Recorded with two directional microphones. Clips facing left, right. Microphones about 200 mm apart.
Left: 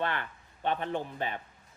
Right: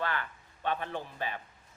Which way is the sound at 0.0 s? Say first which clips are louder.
Left 2 dB; 20° left (ahead or behind).